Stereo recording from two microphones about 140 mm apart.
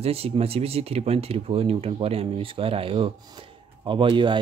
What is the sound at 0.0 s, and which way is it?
Speech, 45° right (ahead or behind).